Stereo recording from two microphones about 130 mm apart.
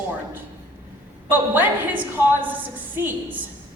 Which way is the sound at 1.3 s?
15° right (ahead or behind).